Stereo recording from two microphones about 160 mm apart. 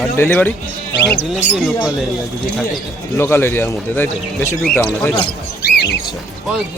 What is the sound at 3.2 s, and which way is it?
Speech, 15° left (ahead or behind).